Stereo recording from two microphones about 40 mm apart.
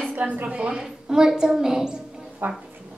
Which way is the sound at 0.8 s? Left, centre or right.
Centre.